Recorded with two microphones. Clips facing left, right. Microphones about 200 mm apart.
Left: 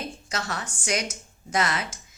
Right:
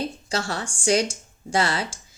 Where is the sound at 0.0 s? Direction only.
30° right (ahead or behind).